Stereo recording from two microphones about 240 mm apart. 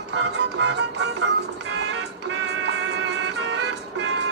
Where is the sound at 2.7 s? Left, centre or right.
Right.